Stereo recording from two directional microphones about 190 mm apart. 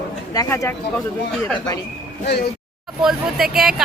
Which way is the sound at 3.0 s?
Centre (ahead or behind).